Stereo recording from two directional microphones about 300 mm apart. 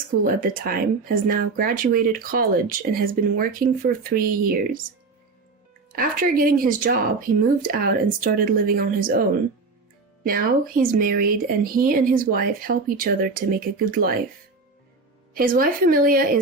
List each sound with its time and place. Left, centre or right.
0.3 s speech: right
6.0 s speech: right
10.2 s speech: right
15.4 s speech: right